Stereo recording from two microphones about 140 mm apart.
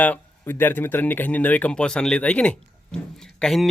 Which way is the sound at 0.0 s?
15° left (ahead or behind).